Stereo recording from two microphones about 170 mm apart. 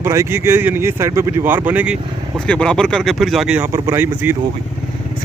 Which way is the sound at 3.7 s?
15° right (ahead or behind).